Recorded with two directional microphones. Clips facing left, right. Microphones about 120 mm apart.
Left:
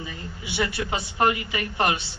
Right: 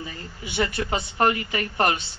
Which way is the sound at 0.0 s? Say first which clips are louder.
Even; 40° right (ahead or behind).